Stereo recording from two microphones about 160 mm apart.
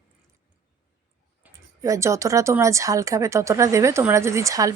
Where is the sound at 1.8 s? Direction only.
20° right (ahead or behind).